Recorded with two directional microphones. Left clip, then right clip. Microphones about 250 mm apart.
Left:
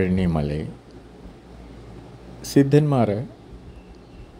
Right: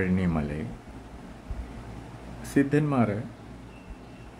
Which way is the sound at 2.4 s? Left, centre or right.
Centre.